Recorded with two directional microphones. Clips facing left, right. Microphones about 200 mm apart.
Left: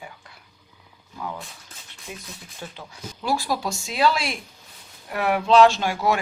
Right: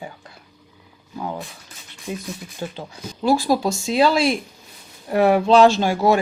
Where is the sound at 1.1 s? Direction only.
30° right (ahead or behind).